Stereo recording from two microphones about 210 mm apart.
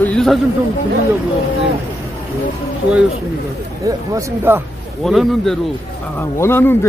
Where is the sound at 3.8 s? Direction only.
15° right (ahead or behind).